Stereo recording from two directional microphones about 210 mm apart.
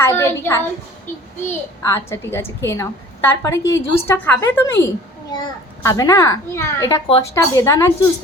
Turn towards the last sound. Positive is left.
turn(degrees=15)  # may be behind; listen again after turning